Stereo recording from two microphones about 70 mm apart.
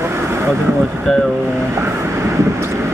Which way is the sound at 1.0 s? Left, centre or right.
Centre.